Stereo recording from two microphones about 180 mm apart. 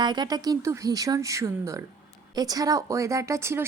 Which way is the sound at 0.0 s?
25° right (ahead or behind).